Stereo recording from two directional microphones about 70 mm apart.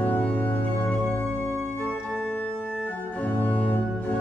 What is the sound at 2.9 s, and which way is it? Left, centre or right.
Organ, left.